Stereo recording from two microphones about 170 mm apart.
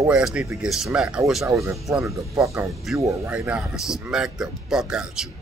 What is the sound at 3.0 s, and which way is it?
Speech, 20° right (ahead or behind).